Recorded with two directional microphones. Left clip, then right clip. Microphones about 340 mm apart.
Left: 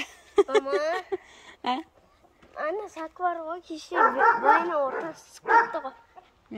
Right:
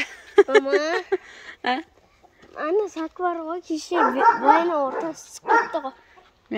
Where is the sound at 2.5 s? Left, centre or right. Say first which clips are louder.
Right 7 dB; right.